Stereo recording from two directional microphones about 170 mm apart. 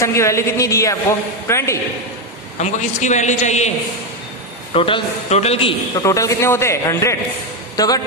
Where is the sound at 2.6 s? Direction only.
45° left (ahead or behind).